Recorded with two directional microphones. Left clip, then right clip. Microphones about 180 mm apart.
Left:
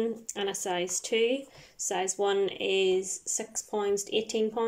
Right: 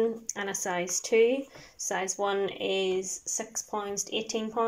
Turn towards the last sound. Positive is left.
turn(degrees=20)  # may be behind; listen again after turning